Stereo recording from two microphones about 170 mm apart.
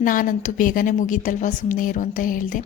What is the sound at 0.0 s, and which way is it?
A woman's voice, 55° left (ahead or behind).